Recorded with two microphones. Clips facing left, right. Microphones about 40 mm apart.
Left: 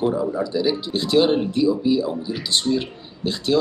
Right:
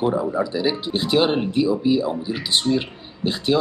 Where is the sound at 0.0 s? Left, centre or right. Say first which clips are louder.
Right 1 dB; centre.